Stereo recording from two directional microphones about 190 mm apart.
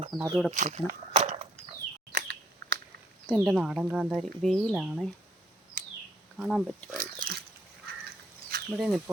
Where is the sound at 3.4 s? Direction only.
5° right (ahead or behind).